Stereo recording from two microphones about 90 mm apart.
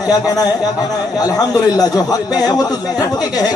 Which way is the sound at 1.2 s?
45° left (ahead or behind).